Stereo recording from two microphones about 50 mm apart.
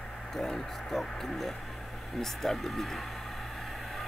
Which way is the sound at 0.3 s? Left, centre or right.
Centre.